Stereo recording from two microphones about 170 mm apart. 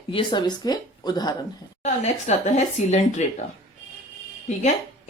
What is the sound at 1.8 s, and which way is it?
Speech, 40° left (ahead or behind).